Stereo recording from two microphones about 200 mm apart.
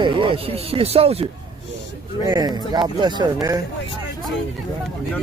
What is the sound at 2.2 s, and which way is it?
Speech, 20° right (ahead or behind).